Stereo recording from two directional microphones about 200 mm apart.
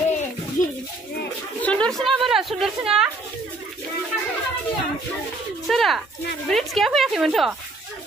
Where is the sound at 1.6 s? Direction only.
5° left (ahead or behind).